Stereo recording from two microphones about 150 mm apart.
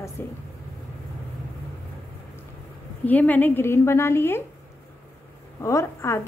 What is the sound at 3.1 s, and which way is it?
A woman's voice, 10° left (ahead or behind).